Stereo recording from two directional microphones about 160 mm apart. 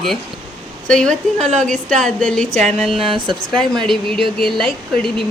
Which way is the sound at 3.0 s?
30° right (ahead or behind).